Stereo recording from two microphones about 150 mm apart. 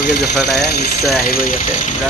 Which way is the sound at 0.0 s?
90° left.